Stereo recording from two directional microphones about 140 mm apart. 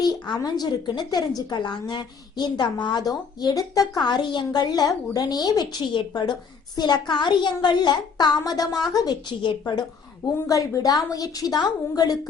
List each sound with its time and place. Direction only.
0.0 s a woman's voice: 30° left (ahead or behind)
10.3 s a woman's voice: 20° left (ahead or behind)